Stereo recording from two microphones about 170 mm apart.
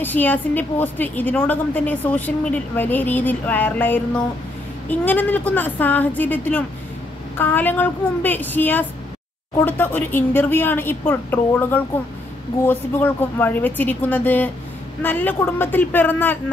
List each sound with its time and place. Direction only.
0.0 s a woman's voice: 10° left (ahead or behind)